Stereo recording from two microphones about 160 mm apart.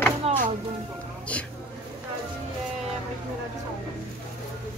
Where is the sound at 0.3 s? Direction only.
40° right (ahead or behind).